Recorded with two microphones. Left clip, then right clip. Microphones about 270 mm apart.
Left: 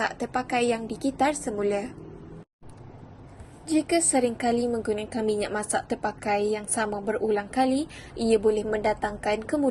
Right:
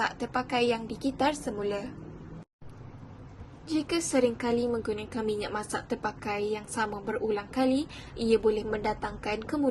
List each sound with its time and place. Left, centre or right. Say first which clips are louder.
0.0 s a woman's voice: left 2 dB; centre
3.7 s a woman's voice: left 6 dB; centre